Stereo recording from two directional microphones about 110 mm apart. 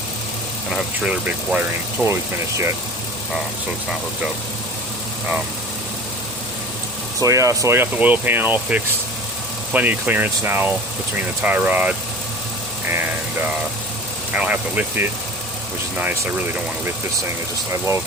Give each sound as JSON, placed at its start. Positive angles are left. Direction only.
{"t": 0.7, "sound": "speech", "side_deg": -10}
{"t": 2.0, "sound": "speech", "side_deg": 15}
{"t": 7.2, "sound": "speech", "side_deg": -30}
{"t": 7.9, "sound": "speech", "side_deg": -15}
{"t": 14.3, "sound": "speech", "side_deg": -10}
{"t": 17.7, "sound": "speech", "side_deg": -25}